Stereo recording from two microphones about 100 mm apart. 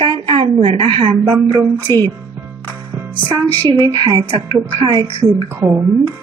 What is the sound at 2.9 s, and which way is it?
Music, 15° right (ahead or behind).